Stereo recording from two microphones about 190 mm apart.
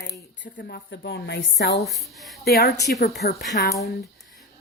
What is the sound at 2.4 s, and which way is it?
Speech, 55° left (ahead or behind).